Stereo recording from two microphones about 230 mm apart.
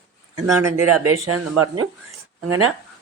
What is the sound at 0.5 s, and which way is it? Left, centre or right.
Speech, centre.